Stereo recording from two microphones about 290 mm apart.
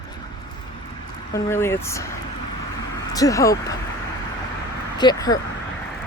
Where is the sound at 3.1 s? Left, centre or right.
Centre.